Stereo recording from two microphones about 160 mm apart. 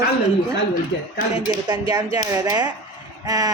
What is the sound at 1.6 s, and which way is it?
A woman's voice, 25° right (ahead or behind).